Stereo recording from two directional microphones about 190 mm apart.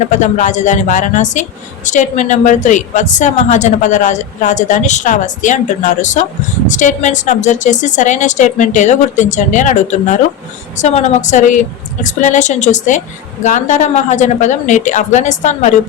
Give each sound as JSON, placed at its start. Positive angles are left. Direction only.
{"t": 0.0, "sound": "speech", "side_deg": 40}